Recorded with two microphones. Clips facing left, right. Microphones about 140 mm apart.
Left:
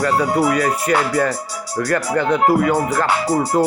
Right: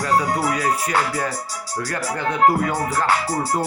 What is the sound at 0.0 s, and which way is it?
Speech, 60° left (ahead or behind).